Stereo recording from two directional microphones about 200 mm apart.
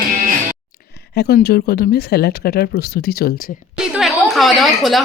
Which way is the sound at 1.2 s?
55° left (ahead or behind).